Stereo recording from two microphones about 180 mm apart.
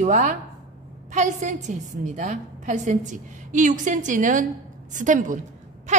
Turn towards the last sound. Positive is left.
turn(degrees=-45)  # may be behind; listen again after turning